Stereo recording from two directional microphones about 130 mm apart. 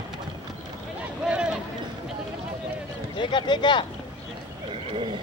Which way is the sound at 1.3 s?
5° right (ahead or behind).